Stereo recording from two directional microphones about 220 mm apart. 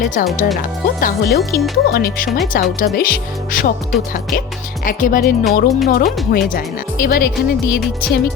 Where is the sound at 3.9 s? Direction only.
Centre (ahead or behind).